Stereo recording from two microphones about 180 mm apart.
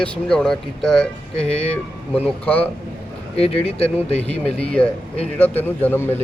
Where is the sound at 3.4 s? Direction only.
35° left (ahead or behind).